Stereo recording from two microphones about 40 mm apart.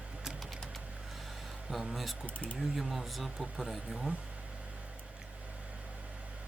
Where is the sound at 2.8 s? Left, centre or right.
Centre.